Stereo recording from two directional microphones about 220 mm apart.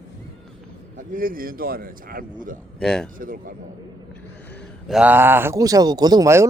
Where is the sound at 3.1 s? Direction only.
40° right (ahead or behind).